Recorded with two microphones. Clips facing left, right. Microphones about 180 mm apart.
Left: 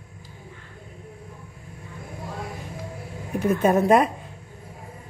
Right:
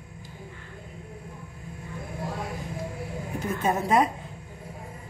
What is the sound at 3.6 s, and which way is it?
Speech, 55° left (ahead or behind).